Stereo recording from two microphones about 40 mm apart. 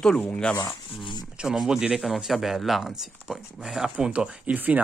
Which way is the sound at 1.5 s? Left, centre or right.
Centre.